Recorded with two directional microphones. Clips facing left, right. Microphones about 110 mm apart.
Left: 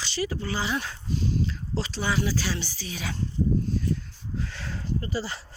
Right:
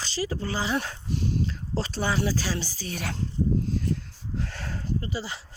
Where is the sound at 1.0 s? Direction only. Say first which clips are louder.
Even; 60° right (ahead or behind).